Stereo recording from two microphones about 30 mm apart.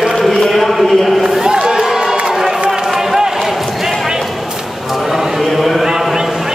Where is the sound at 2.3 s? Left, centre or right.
Centre.